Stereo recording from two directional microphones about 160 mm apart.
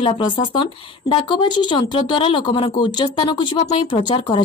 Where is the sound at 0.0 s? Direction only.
30° left (ahead or behind).